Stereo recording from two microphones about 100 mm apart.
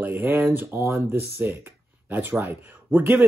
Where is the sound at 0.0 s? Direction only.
20° right (ahead or behind).